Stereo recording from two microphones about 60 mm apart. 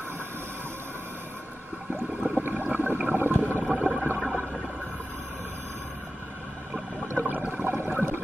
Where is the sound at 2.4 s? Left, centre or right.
Right.